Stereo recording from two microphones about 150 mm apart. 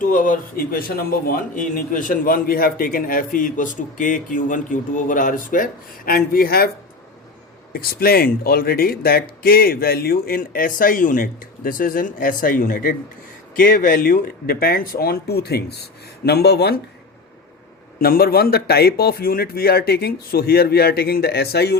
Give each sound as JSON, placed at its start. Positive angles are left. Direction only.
{"t": 0.0, "sound": "a man's voice", "side_deg": 60}
{"t": 6.1, "sound": "speech", "side_deg": 75}
{"t": 7.7, "sound": "speech", "side_deg": 80}
{"t": 18.0, "sound": "speech", "side_deg": 90}